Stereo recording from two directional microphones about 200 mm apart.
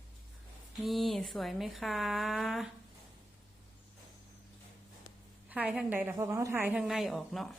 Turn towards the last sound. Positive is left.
turn(degrees=0)  # may be behind; listen again after turning